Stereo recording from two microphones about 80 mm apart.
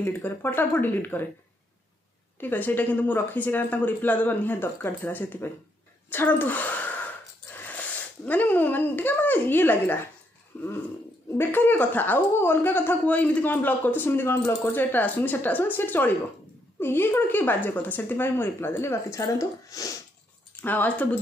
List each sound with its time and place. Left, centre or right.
0.0 s speech: left
2.4 s speech: left
8.3 s speech: left
20.6 s speech: left